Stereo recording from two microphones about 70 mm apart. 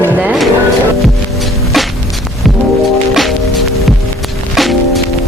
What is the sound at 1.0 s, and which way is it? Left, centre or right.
Music, centre.